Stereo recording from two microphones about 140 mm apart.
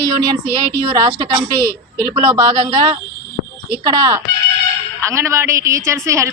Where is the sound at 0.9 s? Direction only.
30° right (ahead or behind).